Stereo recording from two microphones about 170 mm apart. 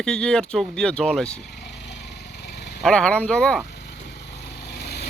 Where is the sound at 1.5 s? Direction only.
75° left (ahead or behind).